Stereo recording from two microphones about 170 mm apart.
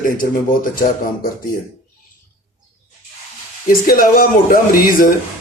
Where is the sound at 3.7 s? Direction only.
55° left (ahead or behind).